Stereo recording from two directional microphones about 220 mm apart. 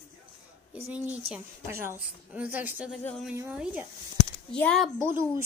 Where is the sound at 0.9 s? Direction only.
5° right (ahead or behind).